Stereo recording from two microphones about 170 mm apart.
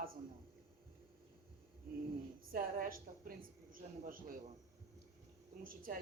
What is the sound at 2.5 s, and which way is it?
Speech, 55° right (ahead or behind).